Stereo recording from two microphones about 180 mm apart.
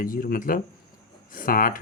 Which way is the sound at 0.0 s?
50° left (ahead or behind).